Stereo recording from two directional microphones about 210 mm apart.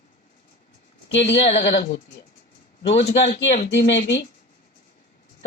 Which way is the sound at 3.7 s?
60° left (ahead or behind).